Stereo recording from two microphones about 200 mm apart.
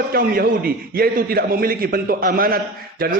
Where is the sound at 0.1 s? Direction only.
45° right (ahead or behind).